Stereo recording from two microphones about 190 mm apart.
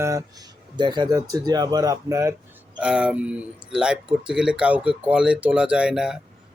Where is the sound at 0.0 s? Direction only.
15° right (ahead or behind).